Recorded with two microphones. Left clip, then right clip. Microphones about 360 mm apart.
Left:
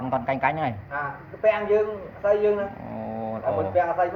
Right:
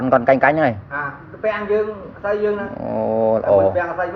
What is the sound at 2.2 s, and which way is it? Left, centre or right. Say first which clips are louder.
Speech: right 1 dB; left.